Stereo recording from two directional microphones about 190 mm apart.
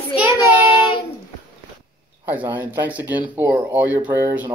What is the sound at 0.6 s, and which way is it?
Child singing, 25° left (ahead or behind).